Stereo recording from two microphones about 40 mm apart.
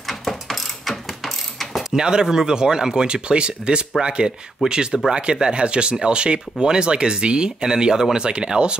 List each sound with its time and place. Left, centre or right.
0.0 s ratchet: centre
1.9 s speech: centre